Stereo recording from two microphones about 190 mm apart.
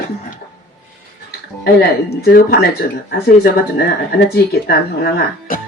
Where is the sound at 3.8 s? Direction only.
55° left (ahead or behind).